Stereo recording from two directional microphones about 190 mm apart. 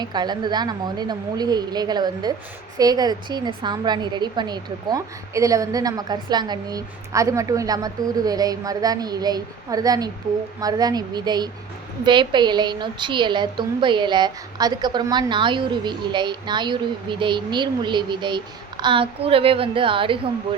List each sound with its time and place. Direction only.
0.0 s a woman's voice: 20° right (ahead or behind)